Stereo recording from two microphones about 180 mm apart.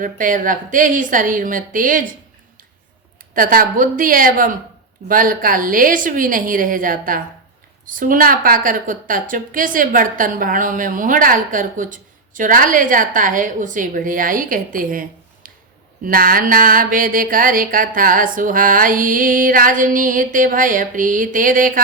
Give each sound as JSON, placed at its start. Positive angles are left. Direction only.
{"t": 0.0, "sound": "a woman's voice", "side_deg": -45}
{"t": 3.3, "sound": "a woman's voice", "side_deg": -50}
{"t": 15.4, "sound": "a sound", "side_deg": -50}
{"t": 16.0, "sound": "a woman's voice", "side_deg": -50}